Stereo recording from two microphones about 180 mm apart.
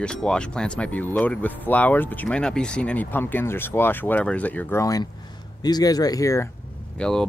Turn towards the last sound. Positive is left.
turn(degrees=5)  # may be behind; listen again after turning